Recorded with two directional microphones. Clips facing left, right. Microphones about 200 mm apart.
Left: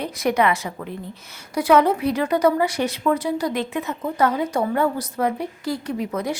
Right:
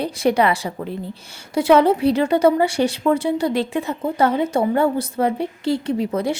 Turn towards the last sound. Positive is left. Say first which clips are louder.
# right 4 dB
turn(degrees=-30)  # may be behind; listen again after turning